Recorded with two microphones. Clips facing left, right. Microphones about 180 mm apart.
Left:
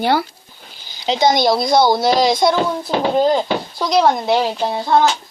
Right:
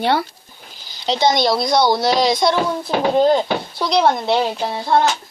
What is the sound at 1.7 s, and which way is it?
Speech, 25° left (ahead or behind).